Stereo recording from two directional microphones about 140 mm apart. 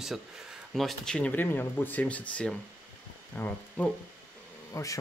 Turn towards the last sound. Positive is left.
turn(degrees=25)  # may be behind; listen again after turning